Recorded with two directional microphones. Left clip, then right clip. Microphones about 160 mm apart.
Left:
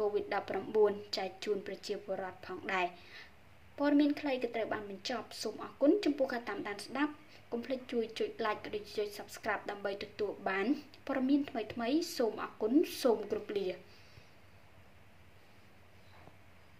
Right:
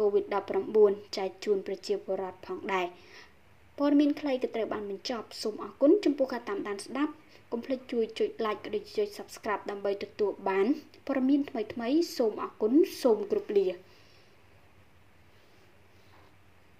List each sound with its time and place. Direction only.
0.1 s a woman's voice: 10° right (ahead or behind)